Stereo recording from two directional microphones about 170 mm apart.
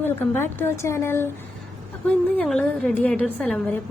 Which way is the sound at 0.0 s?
10° left (ahead or behind).